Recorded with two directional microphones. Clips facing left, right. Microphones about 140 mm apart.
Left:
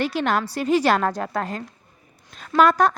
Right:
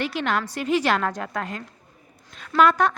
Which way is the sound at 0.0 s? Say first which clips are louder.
Left 3 dB; 40° left (ahead or behind).